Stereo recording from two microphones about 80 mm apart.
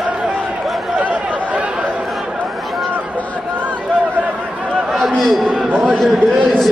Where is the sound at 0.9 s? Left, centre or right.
Centre.